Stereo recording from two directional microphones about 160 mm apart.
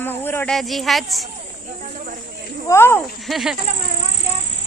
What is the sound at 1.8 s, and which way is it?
Snake, 55° right (ahead or behind).